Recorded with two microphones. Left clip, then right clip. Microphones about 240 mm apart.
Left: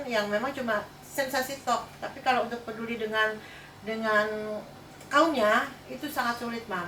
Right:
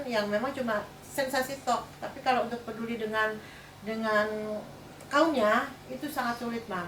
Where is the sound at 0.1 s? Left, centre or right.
Centre.